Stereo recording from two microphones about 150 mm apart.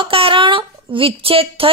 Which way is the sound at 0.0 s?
35° right (ahead or behind).